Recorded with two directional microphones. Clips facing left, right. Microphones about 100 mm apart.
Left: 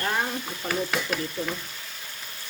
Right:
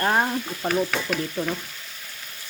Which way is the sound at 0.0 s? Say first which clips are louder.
Right 6 dB; 50° right (ahead or behind).